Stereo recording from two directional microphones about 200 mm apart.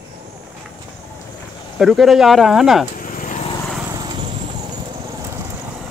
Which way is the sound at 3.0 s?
40° left (ahead or behind).